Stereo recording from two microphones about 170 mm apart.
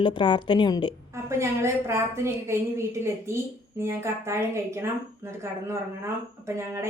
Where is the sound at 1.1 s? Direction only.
15° right (ahead or behind).